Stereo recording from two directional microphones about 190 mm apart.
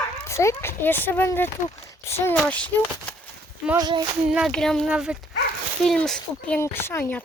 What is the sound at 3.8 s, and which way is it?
Speech, 25° right (ahead or behind).